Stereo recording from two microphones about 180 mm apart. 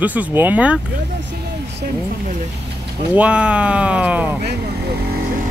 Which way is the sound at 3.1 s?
5° right (ahead or behind).